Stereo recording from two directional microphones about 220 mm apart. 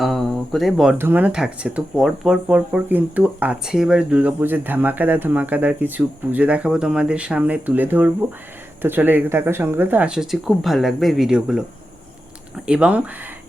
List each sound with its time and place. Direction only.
0.0 s speech: centre (ahead or behind)
12.6 s speech: 5° right (ahead or behind)